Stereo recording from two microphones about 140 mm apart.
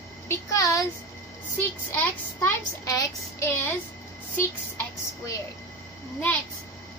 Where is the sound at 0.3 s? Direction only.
20° left (ahead or behind).